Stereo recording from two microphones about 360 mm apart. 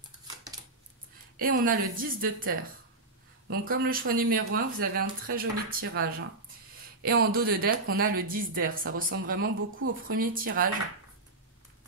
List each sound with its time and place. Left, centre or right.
1.3 s speech: right